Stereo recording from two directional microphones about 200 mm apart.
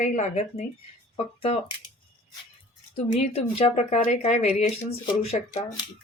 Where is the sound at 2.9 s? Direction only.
30° left (ahead or behind).